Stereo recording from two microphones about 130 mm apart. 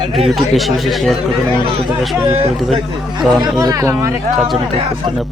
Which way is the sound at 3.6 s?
25° right (ahead or behind).